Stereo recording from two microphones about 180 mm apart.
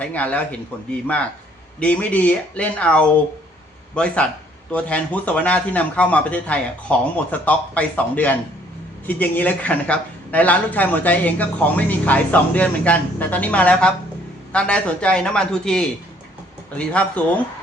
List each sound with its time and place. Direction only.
0.0 s speech: 10° left (ahead or behind)
1.8 s speech: 5° left (ahead or behind)